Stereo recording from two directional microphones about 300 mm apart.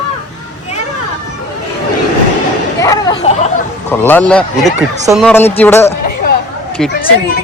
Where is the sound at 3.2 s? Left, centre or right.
Left.